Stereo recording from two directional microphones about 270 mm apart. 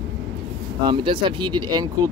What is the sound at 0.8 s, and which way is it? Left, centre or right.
Speech, centre.